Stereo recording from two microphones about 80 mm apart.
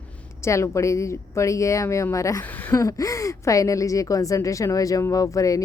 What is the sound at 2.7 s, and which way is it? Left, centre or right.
Speech, left.